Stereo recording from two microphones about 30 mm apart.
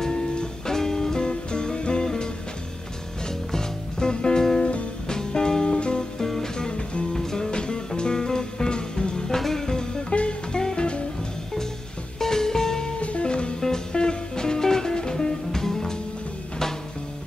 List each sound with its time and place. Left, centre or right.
0.7 s music: centre
6.2 s music: centre
6.5 s music: left
7.5 s music: left
9.3 s music: centre
10.0 s music: left
10.6 s music: left
12.2 s music: centre
13.0 s music: left
13.3 s music: left
13.6 s music: left